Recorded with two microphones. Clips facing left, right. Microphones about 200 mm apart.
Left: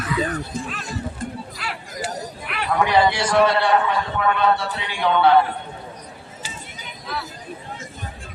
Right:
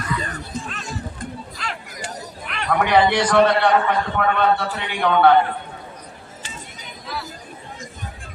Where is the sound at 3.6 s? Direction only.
60° right (ahead or behind).